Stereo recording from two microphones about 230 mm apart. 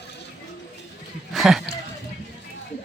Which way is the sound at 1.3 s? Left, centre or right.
Centre.